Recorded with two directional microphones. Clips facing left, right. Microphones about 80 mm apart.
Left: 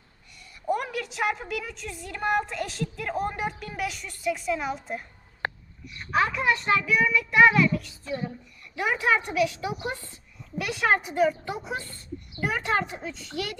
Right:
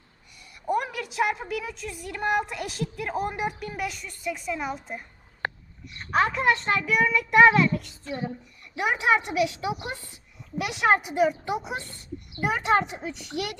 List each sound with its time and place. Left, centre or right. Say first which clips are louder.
0.7 s a sound: right 1 dB; centre
2.0 s a woman's voice: even; centre
3.8 s a woman's voice: even; centre
6.1 s a child's voice: right 2 dB; right; by 13.6 s centre